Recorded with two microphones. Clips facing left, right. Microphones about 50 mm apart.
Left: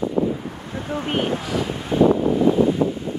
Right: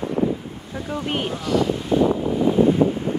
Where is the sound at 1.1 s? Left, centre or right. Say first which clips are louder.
Even; centre.